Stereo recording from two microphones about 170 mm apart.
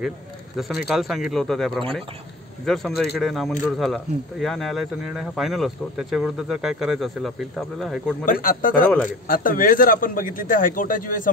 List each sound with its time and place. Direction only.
0.6 s speech: centre (ahead or behind)
8.3 s a man's voice: 55° left (ahead or behind)